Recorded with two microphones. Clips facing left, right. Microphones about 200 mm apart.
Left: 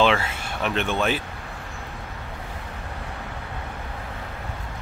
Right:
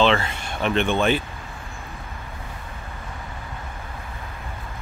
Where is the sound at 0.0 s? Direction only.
5° left (ahead or behind).